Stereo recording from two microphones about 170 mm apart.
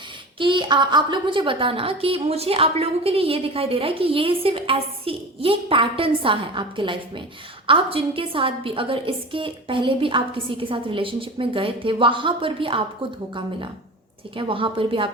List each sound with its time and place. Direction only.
0.3 s a woman's voice: 30° right (ahead or behind)
14.3 s a woman's voice: 30° right (ahead or behind)